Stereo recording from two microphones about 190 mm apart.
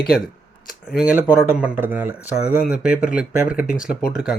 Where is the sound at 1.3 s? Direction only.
10° right (ahead or behind).